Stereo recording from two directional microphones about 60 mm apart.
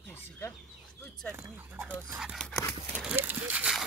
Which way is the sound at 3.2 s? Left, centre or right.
Right.